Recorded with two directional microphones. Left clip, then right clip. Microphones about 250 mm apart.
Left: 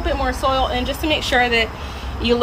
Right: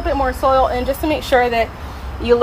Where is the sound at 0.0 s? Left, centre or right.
Centre.